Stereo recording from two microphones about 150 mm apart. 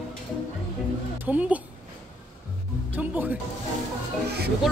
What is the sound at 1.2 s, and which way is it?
Speech, 10° right (ahead or behind).